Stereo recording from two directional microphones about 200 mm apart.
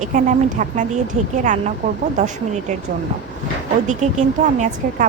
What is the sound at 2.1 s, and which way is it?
Speech, 35° right (ahead or behind).